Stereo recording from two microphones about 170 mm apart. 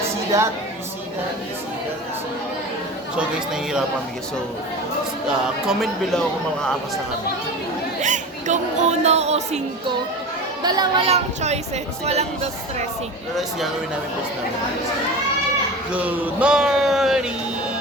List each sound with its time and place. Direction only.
0.3 s a woman's voice: 20° right (ahead or behind)
3.2 s speech: 5° right (ahead or behind)
5.6 s speech: centre (ahead or behind)
8.0 s music: 45° right (ahead or behind)
10.6 s a child's voice: 25° right (ahead or behind)
11.0 s speech: 40° right (ahead or behind)
15.9 s speech: 10° right (ahead or behind)